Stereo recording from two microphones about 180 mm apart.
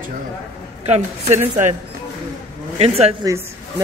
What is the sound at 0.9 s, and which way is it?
Speech, 40° right (ahead or behind).